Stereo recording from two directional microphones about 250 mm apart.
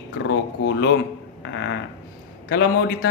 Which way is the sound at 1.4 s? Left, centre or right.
Left.